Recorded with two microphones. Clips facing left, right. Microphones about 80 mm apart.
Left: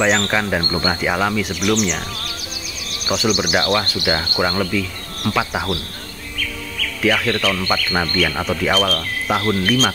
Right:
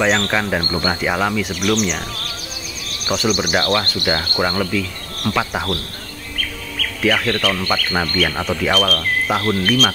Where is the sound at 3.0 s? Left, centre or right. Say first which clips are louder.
Even; centre.